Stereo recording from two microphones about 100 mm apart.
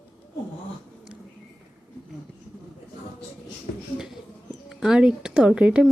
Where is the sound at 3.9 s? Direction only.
5° right (ahead or behind).